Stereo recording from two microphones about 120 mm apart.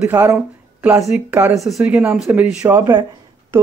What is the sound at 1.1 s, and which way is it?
Speech, 10° right (ahead or behind).